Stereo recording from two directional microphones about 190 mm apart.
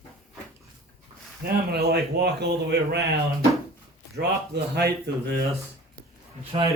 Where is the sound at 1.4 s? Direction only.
50° right (ahead or behind).